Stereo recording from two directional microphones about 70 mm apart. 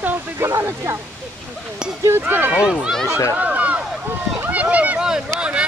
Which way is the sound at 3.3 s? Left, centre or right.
Right.